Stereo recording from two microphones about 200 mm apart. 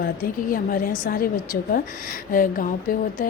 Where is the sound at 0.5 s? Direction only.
45° left (ahead or behind).